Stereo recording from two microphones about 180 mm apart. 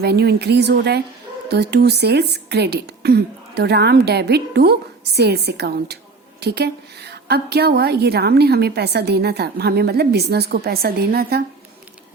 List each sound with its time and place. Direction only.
0.0 s a woman's voice: 65° right (ahead or behind)